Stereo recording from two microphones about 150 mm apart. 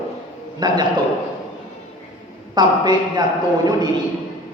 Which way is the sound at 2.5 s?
30° right (ahead or behind).